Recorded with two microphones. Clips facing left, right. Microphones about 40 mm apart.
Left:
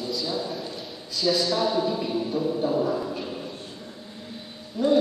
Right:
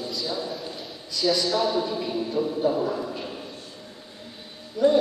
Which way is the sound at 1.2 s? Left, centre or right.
Centre.